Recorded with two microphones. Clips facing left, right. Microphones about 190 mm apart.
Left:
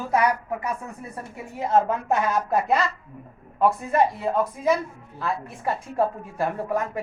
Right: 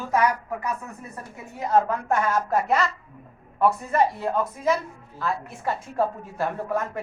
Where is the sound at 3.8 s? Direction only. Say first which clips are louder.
Left 1 dB; centre (ahead or behind).